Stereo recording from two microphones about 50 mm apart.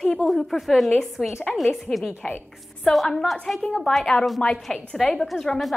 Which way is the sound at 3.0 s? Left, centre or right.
Centre.